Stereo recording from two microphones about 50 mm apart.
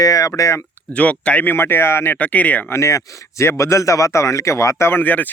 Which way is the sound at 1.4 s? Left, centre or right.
Left.